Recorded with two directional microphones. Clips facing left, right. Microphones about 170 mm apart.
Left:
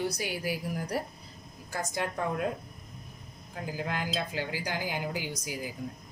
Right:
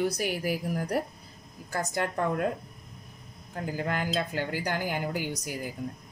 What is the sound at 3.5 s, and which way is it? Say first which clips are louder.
Speech: right 3 dB; 55° right (ahead or behind).